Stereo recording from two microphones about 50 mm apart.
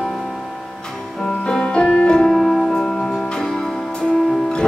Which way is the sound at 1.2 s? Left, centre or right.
Centre.